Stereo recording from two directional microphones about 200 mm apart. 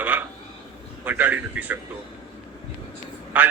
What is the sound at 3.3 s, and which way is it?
Speech, 10° right (ahead or behind).